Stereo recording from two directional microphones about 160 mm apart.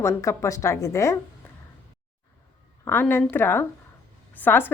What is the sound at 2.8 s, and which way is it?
A woman's voice, 15° left (ahead or behind).